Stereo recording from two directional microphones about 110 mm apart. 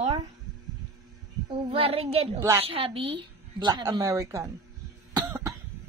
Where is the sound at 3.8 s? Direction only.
30° right (ahead or behind).